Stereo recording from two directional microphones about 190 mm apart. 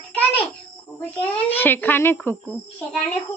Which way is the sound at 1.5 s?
10° left (ahead or behind).